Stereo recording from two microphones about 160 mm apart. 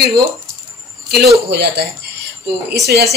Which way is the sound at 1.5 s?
90° right.